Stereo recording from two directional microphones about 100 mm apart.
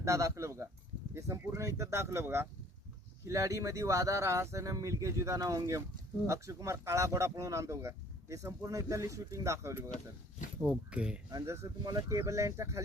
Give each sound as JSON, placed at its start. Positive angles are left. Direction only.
{"t": 0.0, "sound": "speech", "side_deg": -30}
{"t": 10.6, "sound": "speech", "side_deg": -15}
{"t": 11.3, "sound": "speech", "side_deg": -30}